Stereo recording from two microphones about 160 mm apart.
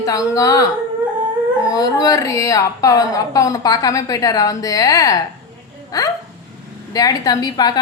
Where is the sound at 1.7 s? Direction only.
20° left (ahead or behind).